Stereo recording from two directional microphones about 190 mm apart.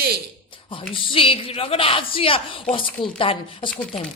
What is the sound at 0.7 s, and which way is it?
Speech, 30° left (ahead or behind).